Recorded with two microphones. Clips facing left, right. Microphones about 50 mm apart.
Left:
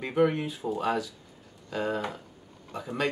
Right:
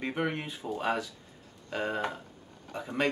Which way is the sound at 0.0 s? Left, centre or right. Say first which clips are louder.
Left 7 dB; centre.